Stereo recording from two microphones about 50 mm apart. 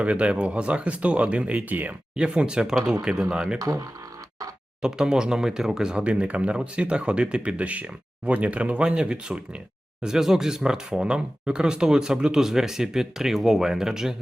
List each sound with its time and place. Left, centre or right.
0.0 s speech: right
1.7 s speech: right
2.1 s speech: centre
4.8 s speech: centre